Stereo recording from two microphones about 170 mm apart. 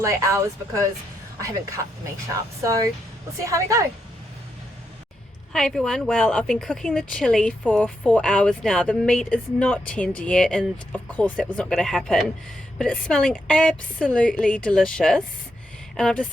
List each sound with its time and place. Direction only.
0.0 s speech: 15° right (ahead or behind)
5.5 s a woman's voice: centre (ahead or behind)